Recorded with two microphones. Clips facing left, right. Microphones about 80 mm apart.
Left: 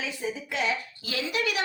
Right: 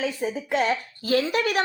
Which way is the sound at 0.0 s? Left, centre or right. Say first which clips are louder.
Right 6 dB; right.